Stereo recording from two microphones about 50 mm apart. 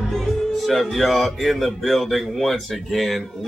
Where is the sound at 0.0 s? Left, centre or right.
Centre.